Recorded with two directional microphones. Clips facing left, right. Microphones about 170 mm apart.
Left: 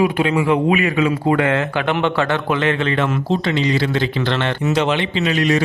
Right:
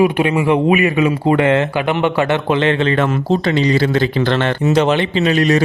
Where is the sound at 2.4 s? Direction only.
25° right (ahead or behind).